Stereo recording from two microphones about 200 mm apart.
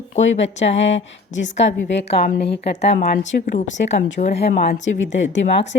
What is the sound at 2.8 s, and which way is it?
Speech, 35° left (ahead or behind).